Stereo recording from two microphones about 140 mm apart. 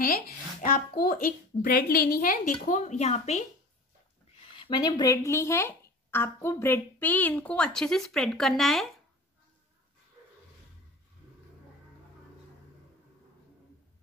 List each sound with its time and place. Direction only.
0.0 s a sound: 90° left
0.6 s a woman's voice: 80° left; by 3.4 s 50° left (ahead or behind)
4.6 s speech: 30° left (ahead or behind); by 8.8 s centre (ahead or behind)